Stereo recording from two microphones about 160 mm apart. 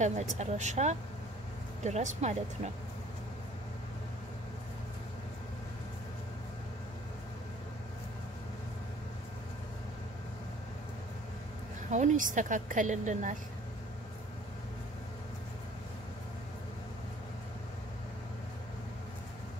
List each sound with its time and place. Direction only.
0.0 s speech: 45° right (ahead or behind)
11.9 s speech: 50° right (ahead or behind)